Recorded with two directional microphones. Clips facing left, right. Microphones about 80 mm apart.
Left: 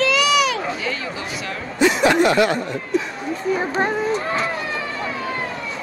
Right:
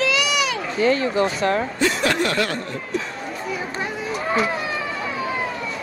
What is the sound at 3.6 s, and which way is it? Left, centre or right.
Chatter, left.